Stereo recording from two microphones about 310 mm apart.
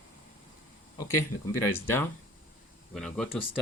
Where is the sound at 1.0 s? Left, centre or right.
Centre.